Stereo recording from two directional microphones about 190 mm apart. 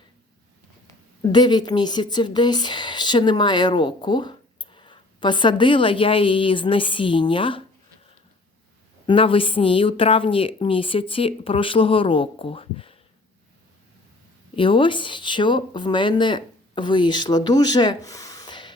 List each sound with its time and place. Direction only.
1.2 s speech: 25° left (ahead or behind)
9.0 s speech: 30° left (ahead or behind)
14.5 s speech: 25° left (ahead or behind)